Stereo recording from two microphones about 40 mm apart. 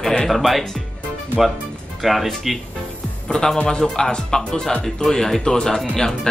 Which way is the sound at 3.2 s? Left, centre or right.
Centre.